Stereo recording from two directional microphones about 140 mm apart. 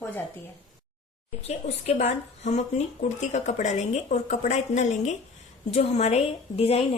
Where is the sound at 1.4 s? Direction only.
50° left (ahead or behind).